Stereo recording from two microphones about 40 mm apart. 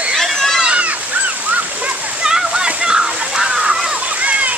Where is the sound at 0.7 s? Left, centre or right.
Right.